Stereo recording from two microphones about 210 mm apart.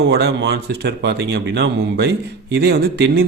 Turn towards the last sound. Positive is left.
turn(degrees=-50)  # may be behind; listen again after turning